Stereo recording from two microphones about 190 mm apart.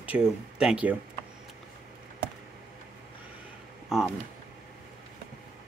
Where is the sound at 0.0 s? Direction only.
5° right (ahead or behind).